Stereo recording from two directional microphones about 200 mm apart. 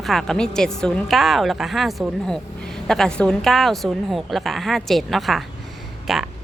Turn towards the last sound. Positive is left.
turn(degrees=0)  # may be behind; listen again after turning